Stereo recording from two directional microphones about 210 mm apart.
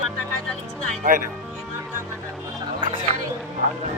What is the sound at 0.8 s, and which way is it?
Speech, 40° right (ahead or behind).